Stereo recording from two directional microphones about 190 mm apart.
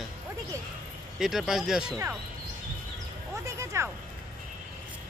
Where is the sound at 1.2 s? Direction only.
Centre (ahead or behind).